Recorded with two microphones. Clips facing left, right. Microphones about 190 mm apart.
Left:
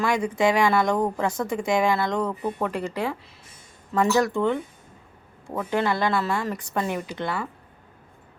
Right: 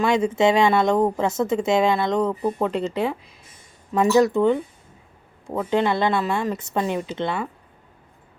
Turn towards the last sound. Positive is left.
turn(degrees=-20)  # may be behind; listen again after turning